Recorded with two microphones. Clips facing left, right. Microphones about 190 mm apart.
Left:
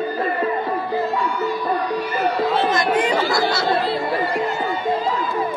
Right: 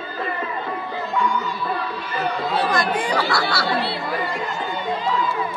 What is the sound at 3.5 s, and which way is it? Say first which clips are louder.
Speech: left 3 dB; 20° left (ahead or behind).